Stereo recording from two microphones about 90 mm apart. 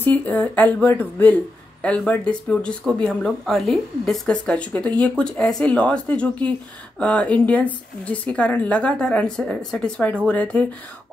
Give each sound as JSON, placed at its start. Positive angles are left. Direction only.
{"t": 0.0, "sound": "speech", "side_deg": 20}